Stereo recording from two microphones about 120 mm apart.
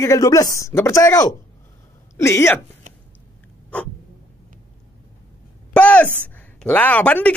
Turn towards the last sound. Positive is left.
turn(degrees=10)  # may be behind; listen again after turning